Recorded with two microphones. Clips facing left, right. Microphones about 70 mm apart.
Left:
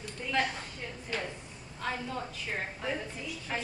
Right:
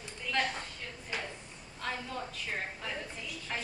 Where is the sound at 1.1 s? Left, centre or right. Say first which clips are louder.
Left 3 dB; centre.